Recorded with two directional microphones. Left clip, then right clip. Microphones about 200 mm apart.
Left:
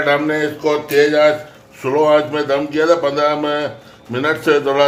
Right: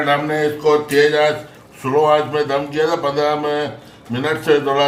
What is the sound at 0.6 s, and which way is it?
A man's voice, 30° left (ahead or behind).